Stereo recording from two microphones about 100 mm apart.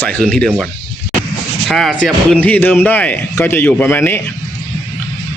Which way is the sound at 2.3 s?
15° left (ahead or behind).